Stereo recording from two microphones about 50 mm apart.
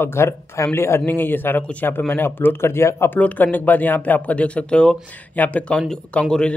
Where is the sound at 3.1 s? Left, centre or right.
Left.